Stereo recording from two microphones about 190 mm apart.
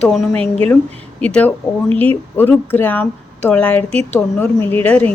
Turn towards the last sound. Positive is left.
turn(degrees=10)  # may be behind; listen again after turning